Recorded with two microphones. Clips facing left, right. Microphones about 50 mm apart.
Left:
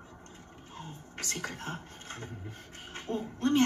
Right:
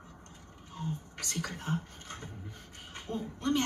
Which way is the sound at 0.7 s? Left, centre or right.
Left.